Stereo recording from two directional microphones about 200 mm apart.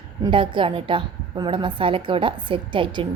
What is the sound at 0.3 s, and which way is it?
Speech, 25° right (ahead or behind).